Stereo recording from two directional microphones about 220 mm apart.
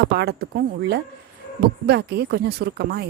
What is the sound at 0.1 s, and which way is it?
Speech, 45° right (ahead or behind).